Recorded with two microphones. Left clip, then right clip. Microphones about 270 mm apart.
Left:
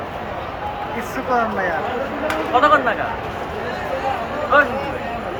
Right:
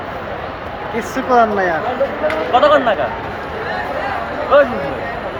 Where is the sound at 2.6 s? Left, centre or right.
Right.